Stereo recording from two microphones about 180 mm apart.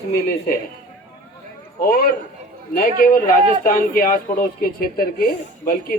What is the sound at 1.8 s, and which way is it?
A man's voice, 55° left (ahead or behind).